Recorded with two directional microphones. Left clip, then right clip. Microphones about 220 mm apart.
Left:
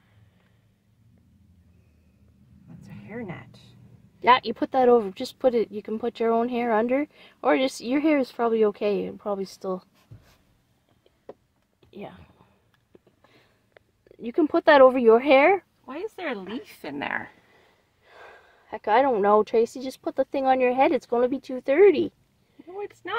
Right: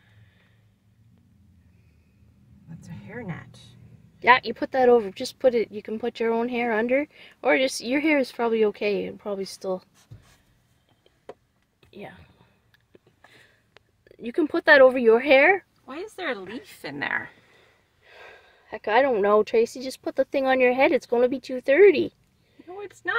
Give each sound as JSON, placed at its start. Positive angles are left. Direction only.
{"t": 4.2, "sound": "speech", "side_deg": 5}
{"t": 11.8, "sound": "whispering", "side_deg": 5}
{"t": 12.9, "sound": "a sound", "side_deg": 0}
{"t": 14.0, "sound": "speech", "side_deg": 5}
{"t": 15.9, "sound": "a woman's voice", "side_deg": 20}
{"t": 18.0, "sound": "speech", "side_deg": 0}
{"t": 22.8, "sound": "speech", "side_deg": 25}